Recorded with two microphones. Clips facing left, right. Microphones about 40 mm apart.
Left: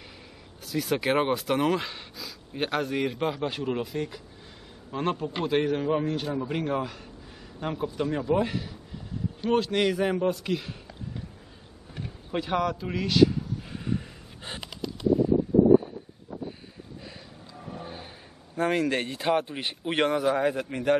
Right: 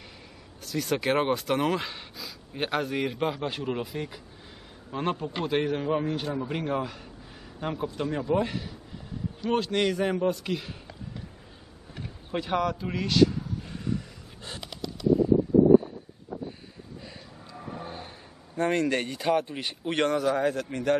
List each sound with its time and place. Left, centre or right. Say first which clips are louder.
0.7 s speech: left 1 dB; centre
11.9 s vehicle: left 1 dB; centre
13.8 s gasp: left 1 dB; left
17.5 s speech: right 1 dB; centre